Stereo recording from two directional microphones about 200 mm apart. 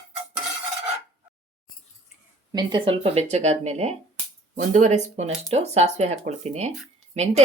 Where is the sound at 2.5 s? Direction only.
20° right (ahead or behind).